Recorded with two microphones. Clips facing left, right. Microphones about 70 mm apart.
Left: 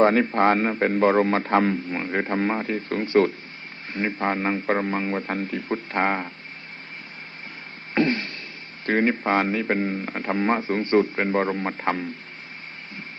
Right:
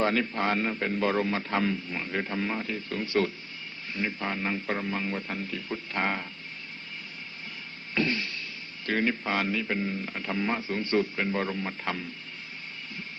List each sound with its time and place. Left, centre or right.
0.0 s a man's voice: left
7.9 s a sound: left
8.9 s a man's voice: left